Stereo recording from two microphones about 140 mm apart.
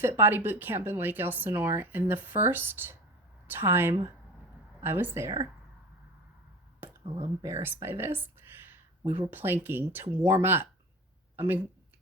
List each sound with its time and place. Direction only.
0.0 s speech: 15° right (ahead or behind)
7.4 s speech: 20° right (ahead or behind)